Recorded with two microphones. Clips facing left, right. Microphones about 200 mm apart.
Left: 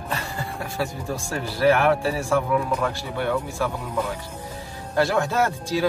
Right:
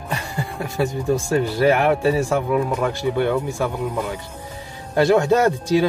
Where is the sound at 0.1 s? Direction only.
15° right (ahead or behind).